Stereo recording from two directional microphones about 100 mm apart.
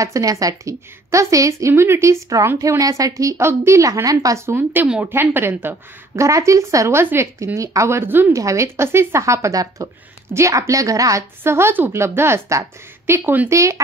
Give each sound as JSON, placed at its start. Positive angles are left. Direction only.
{"t": 0.0, "sound": "a woman's voice", "side_deg": -35}
{"t": 5.1, "sound": "a woman's voice", "side_deg": -20}
{"t": 13.5, "sound": "a woman's voice", "side_deg": -30}